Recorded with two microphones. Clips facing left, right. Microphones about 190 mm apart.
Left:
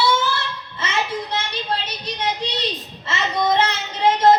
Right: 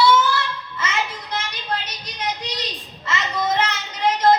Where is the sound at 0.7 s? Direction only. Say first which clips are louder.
Left 3 dB; 30° left (ahead or behind).